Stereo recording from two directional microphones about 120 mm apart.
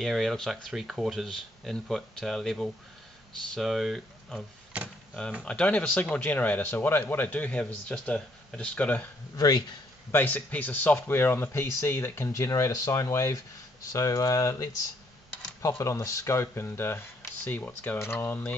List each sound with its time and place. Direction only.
0.0 s speech: centre (ahead or behind)
9.4 s speech: 35° left (ahead or behind)
10.1 s speech: 15° left (ahead or behind)
15.8 s speech: 25° left (ahead or behind)